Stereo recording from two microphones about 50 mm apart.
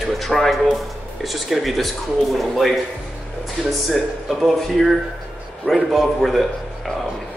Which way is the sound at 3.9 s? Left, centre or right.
Centre.